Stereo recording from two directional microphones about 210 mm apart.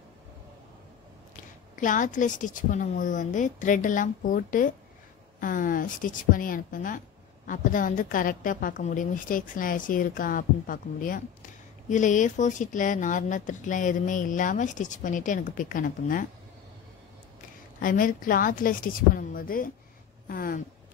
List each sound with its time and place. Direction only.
1.3 s speech: 40° left (ahead or behind)
17.7 s speech: 40° left (ahead or behind)